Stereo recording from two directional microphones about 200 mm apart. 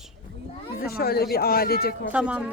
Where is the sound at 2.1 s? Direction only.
5° right (ahead or behind).